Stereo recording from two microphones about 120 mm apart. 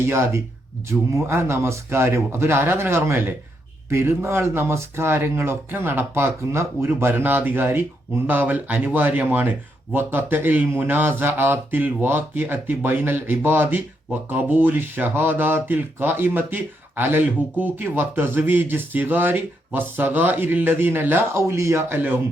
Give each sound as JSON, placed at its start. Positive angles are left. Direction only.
{"t": 0.0, "sound": "speech", "side_deg": -20}